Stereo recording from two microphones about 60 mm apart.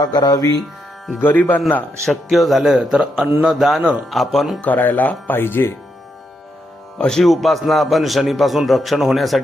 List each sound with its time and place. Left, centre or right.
0.0 s speech: left
1.2 s speech: left
2.0 s a man's voice: centre
4.6 s speech: left
5.4 s speech: left
7.0 s a man's voice: centre